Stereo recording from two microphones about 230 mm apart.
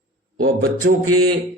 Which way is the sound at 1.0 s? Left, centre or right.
Right.